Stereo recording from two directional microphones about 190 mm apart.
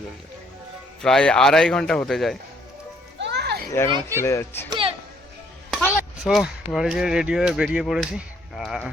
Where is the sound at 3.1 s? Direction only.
65° right (ahead or behind).